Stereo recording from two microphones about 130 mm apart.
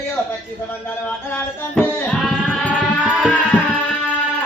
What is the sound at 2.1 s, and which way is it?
Sheep, 5° left (ahead or behind).